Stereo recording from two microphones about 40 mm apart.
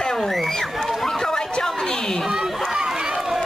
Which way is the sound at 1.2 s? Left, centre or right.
Centre.